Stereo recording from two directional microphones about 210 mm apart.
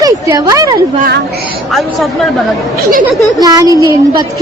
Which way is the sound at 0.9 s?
45° right (ahead or behind).